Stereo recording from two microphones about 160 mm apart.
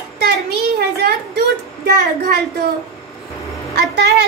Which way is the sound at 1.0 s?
85° right.